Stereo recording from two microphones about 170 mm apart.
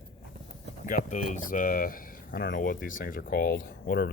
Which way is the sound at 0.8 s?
55° left (ahead or behind).